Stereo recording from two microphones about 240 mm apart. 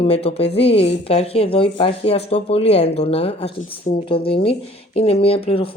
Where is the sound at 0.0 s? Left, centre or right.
Left.